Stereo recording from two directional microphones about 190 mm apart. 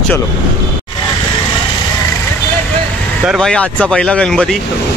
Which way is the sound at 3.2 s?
Centre (ahead or behind).